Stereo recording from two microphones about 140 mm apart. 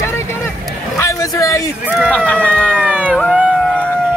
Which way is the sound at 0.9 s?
25° left (ahead or behind).